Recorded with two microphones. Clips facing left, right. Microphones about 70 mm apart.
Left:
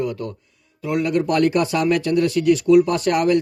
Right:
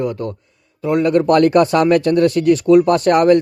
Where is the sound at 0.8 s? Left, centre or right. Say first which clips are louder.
Right 6 dB; right.